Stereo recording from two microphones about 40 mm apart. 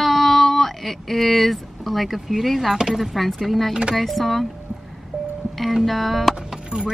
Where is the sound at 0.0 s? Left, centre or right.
Centre.